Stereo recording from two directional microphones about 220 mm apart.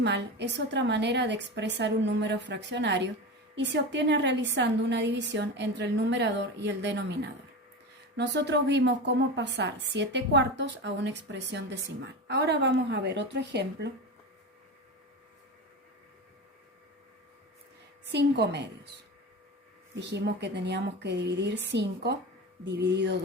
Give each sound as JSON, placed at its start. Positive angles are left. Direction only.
{"t": 0.0, "sound": "a woman's voice", "side_deg": -50}
{"t": 18.1, "sound": "a woman's voice", "side_deg": -50}
{"t": 20.0, "sound": "a woman's voice", "side_deg": -50}